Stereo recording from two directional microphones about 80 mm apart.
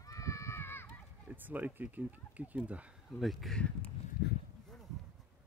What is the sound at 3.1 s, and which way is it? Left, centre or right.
Speech, centre.